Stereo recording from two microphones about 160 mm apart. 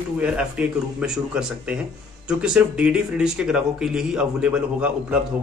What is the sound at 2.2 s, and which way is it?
Speech, 5° right (ahead or behind).